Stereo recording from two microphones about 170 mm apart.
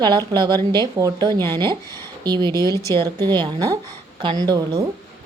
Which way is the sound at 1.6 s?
15° left (ahead or behind).